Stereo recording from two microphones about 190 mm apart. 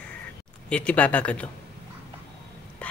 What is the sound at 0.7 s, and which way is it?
Speech, 5° left (ahead or behind).